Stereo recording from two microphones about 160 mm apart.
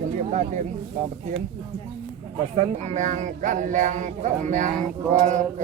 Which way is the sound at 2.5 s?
45° right (ahead or behind).